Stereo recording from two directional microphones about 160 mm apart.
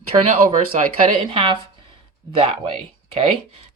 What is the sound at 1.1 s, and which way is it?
Speech, 35° right (ahead or behind).